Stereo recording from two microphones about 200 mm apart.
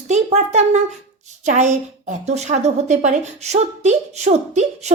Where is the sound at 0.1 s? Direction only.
35° right (ahead or behind).